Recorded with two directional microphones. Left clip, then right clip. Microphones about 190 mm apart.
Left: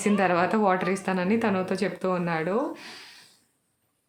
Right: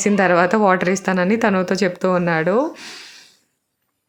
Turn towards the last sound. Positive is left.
turn(degrees=-25)  # may be behind; listen again after turning